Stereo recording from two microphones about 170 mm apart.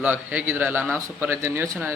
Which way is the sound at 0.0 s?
10° right (ahead or behind).